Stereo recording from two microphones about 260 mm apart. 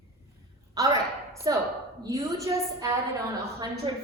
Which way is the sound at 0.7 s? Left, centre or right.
Centre.